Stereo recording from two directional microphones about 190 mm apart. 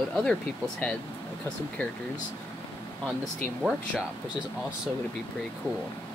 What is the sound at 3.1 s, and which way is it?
Speech, centre (ahead or behind).